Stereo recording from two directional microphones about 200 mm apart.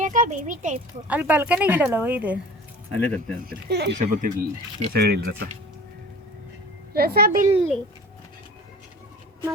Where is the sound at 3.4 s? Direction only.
55° right (ahead or behind).